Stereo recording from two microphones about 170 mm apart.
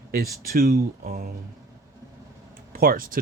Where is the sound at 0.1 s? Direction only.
60° right (ahead or behind).